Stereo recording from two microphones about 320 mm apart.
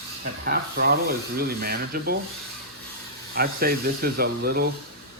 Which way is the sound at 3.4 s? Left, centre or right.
Right.